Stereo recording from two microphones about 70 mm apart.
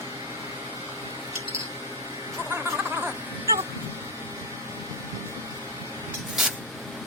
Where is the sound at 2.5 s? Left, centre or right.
Right.